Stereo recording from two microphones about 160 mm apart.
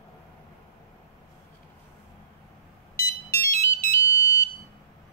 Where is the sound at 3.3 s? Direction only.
15° left (ahead or behind).